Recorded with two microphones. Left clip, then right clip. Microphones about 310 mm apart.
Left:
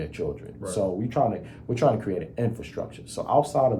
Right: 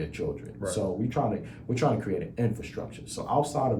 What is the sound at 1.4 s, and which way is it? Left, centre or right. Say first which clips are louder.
Speech: left 5 dB; centre.